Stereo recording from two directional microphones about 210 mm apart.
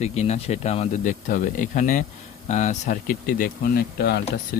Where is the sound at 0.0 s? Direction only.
30° left (ahead or behind).